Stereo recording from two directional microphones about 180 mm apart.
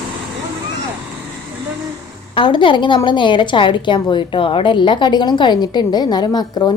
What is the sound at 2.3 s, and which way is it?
A woman's voice, 25° left (ahead or behind).